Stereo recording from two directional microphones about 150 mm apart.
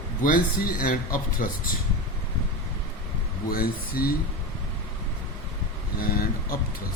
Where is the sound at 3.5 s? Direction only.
80° left.